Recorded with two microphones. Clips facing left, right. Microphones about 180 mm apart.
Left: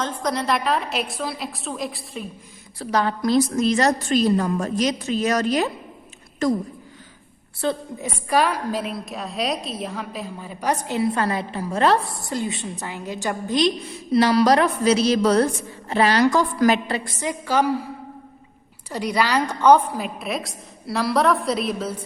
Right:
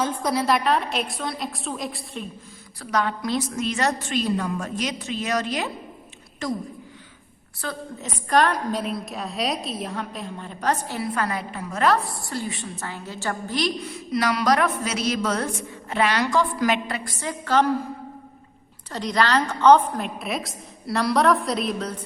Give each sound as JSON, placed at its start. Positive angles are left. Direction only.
{"t": 0.0, "sound": "a woman's voice", "side_deg": -10}
{"t": 2.7, "sound": "a woman's voice", "side_deg": 30}
{"t": 7.6, "sound": "a woman's voice", "side_deg": 25}
{"t": 8.0, "sound": "a woman's voice", "side_deg": 5}
{"t": 18.9, "sound": "a woman's voice", "side_deg": 10}